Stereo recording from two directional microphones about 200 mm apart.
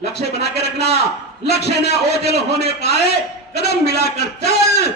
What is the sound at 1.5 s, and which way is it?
A man's voice, 55° left (ahead or behind).